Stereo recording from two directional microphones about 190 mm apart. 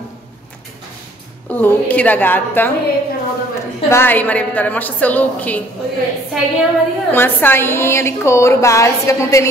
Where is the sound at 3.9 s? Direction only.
10° left (ahead or behind).